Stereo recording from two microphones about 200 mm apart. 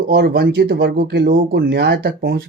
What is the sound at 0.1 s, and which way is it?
Speech, 55° right (ahead or behind).